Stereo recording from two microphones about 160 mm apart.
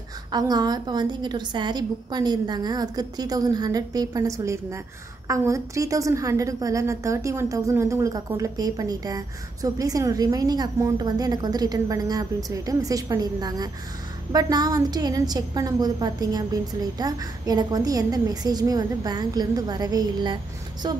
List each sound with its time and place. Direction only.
0.3 s a woman's voice: 25° right (ahead or behind)